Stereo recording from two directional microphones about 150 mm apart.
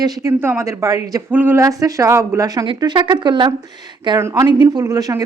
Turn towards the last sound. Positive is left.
turn(degrees=-25)  # may be behind; listen again after turning